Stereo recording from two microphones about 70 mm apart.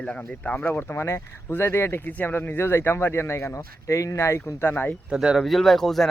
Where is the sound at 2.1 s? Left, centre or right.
Left.